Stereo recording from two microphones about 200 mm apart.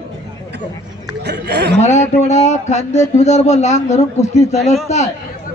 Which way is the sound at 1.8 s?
35° left (ahead or behind).